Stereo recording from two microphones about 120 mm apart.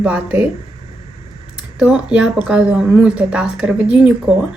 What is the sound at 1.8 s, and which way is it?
A woman's voice, 10° right (ahead or behind).